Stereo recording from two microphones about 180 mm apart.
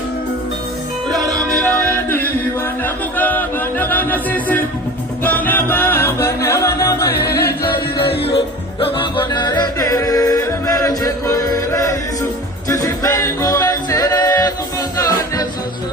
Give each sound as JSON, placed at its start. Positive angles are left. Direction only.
{"t": 1.1, "sound": "music", "side_deg": 0}
{"t": 7.1, "sound": "music", "side_deg": 65}
{"t": 8.8, "sound": "music", "side_deg": 30}